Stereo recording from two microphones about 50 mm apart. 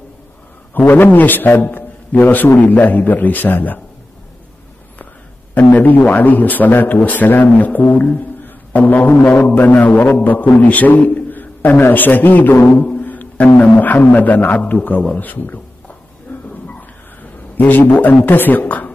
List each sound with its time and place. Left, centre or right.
0.7 s a man's voice: left
5.5 s a man's voice: left
9.6 s a man's voice: left
12.9 s music: left
13.6 s a man's voice: left
15.1 s a sound: left